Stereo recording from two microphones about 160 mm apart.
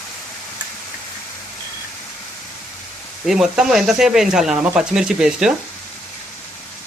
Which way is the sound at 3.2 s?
5° right (ahead or behind).